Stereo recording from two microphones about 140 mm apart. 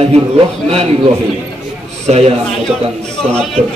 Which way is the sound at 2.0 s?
45° right (ahead or behind).